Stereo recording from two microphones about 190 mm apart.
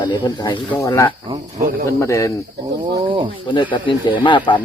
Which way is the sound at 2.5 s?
20° right (ahead or behind).